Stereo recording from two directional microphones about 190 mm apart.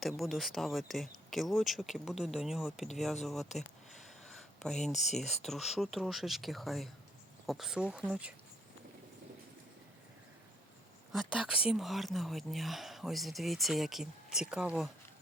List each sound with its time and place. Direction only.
0.0 s speech: centre (ahead or behind)
4.2 s a sound: centre (ahead or behind)
4.9 s speech: 40° left (ahead or behind)
5.5 s speech: centre (ahead or behind)
11.1 s speech: centre (ahead or behind)